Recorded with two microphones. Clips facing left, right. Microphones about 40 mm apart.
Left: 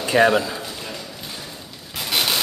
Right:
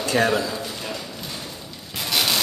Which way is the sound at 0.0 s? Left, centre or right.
Centre.